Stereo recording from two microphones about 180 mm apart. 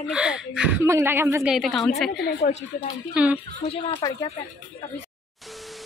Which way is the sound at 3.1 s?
5° right (ahead or behind).